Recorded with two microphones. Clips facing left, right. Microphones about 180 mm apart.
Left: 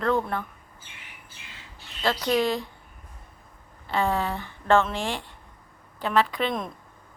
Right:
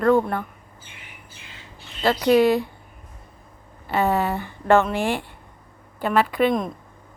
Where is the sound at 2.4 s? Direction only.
60° right (ahead or behind).